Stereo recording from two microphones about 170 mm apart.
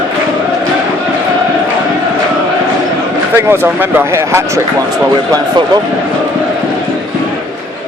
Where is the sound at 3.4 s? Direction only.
15° right (ahead or behind).